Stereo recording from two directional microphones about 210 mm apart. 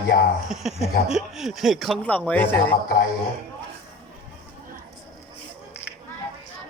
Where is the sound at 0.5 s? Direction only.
Centre (ahead or behind).